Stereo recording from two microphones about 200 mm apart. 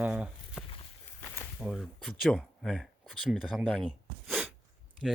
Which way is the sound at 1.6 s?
Centre (ahead or behind).